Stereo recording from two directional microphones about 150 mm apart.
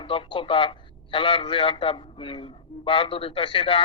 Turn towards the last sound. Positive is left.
turn(degrees=35)  # may be behind; listen again after turning